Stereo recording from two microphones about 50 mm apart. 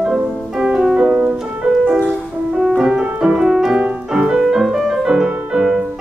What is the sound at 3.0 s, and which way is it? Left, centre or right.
Piano, right.